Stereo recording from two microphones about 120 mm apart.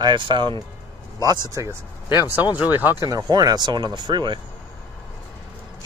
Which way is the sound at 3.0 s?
30° right (ahead or behind).